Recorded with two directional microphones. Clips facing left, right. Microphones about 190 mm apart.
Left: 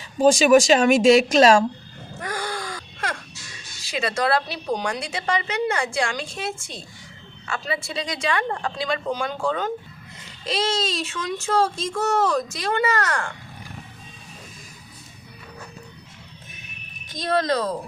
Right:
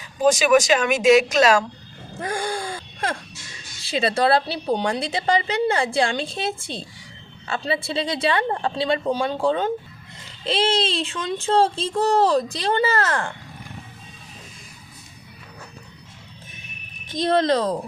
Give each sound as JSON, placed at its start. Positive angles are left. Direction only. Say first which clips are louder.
{"t": 0.2, "sound": "speech", "louder": "left 2 dB", "side_deg": 30}
{"t": 2.2, "sound": "gasp", "louder": "right 3 dB", "side_deg": -25}
{"t": 3.8, "sound": "a woman's voice", "louder": "right 4 dB", "side_deg": -30}
{"t": 17.1, "sound": "speech", "louder": "right 3 dB", "side_deg": -25}